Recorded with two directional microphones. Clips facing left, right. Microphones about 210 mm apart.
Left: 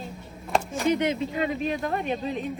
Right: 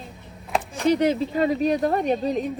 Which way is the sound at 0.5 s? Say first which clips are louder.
Even; centre (ahead or behind).